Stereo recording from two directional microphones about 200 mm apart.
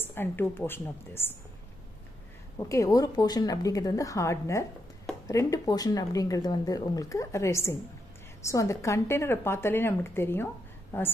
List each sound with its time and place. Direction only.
0.0 s speech: 10° left (ahead or behind)
2.6 s speech: 15° left (ahead or behind)